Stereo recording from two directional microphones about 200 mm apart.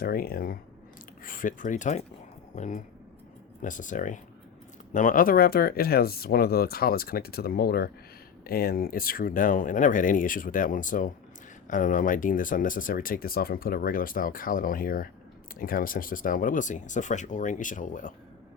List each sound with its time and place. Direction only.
0.0 s speech: 50° left (ahead or behind)